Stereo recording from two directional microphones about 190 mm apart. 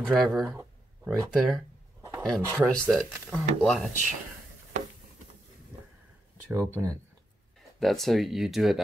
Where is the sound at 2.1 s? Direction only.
Centre (ahead or behind).